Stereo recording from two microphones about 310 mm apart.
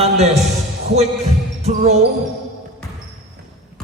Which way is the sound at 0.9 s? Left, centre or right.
Right.